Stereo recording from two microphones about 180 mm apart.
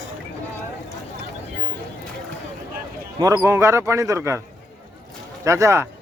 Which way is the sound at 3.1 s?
20° right (ahead or behind).